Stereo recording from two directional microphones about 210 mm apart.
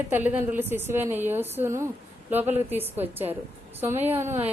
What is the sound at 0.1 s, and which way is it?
A woman's voice, 10° right (ahead or behind).